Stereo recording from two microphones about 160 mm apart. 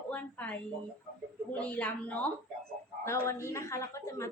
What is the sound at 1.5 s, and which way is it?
A man's voice, 10° left (ahead or behind).